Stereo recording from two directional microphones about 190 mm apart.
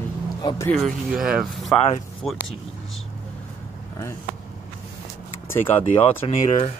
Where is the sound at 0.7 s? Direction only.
Centre (ahead or behind).